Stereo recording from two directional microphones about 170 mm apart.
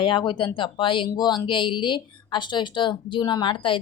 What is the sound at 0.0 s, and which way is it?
A woman's voice, 30° left (ahead or behind).